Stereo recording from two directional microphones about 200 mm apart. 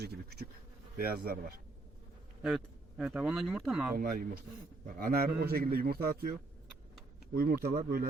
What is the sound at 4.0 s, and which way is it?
Speech, 45° right (ahead or behind).